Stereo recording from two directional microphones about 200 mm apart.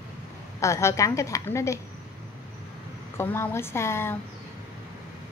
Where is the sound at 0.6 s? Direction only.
15° left (ahead or behind).